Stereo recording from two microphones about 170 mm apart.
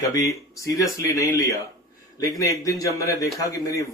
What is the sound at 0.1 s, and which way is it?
Speech, 20° left (ahead or behind).